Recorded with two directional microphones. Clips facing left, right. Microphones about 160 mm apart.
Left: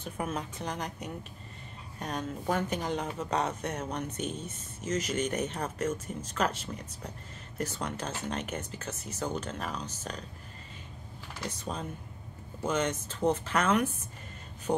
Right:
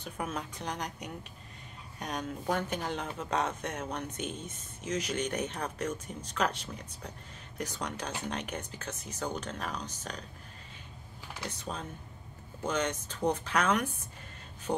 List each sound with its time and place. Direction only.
0.0 s speech: 5° left (ahead or behind)
11.6 s speech: 5° left (ahead or behind)